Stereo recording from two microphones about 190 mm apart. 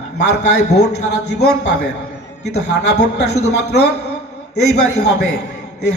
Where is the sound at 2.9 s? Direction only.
60° left (ahead or behind).